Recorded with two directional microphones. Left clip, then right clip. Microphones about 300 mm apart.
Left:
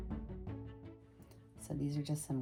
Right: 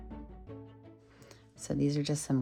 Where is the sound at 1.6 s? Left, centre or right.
Right.